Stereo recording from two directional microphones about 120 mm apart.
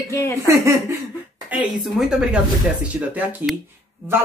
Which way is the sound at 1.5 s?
10° right (ahead or behind).